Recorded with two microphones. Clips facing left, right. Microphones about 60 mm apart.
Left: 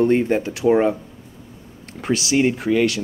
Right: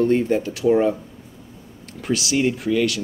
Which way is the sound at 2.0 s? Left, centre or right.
Left.